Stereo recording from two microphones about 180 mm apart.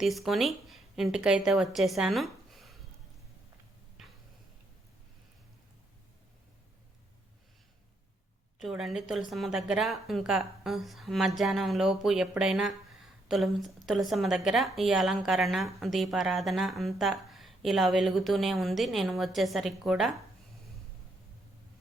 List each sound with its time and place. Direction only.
0.0 s speech: centre (ahead or behind)
4.0 s tick-tock: centre (ahead or behind)
8.5 s speech: centre (ahead or behind)